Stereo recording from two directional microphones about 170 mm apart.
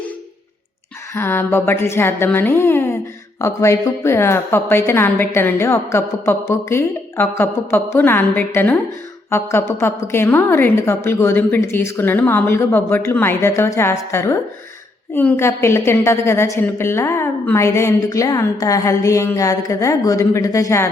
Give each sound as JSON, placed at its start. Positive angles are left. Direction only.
{"t": 1.1, "sound": "a woman's voice", "side_deg": 10}